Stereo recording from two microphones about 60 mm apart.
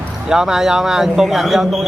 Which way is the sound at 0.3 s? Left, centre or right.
Centre.